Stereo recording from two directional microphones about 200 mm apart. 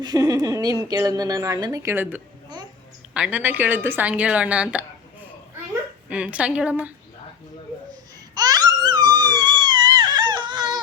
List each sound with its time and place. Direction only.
0.0 s a woman's voice: 20° right (ahead or behind)
6.1 s a woman's voice: 5° right (ahead or behind)
8.4 s crying: 20° right (ahead or behind)